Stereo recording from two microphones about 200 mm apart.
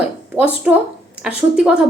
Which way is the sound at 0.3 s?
10° right (ahead or behind).